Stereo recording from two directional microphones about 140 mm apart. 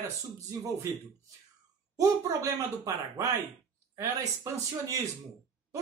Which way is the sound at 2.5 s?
25° right (ahead or behind).